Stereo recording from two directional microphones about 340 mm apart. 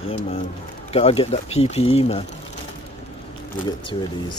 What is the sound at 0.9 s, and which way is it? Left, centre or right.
Speech, centre.